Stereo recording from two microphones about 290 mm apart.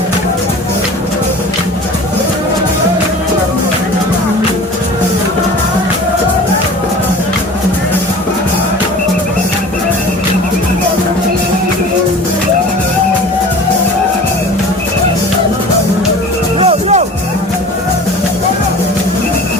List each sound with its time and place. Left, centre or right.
16.6 s music: right